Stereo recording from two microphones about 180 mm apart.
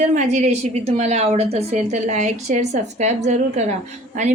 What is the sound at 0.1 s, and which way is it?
A woman's voice, 40° right (ahead or behind).